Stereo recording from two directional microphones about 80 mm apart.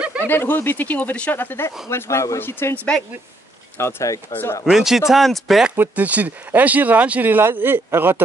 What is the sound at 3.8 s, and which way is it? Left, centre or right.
Speech, left.